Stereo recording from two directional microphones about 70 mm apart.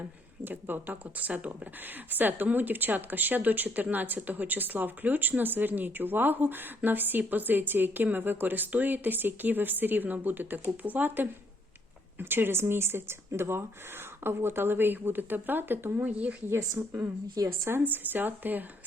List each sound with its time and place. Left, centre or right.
0.4 s a woman's voice: right
16.8 s a woman's voice: right
17.7 s a woman's voice: right